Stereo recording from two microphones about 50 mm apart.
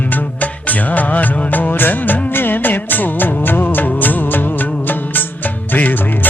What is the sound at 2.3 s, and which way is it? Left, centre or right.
Music, left.